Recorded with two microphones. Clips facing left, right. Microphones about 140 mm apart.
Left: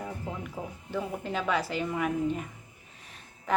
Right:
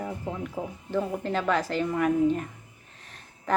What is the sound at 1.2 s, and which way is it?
A woman's voice, 10° left (ahead or behind).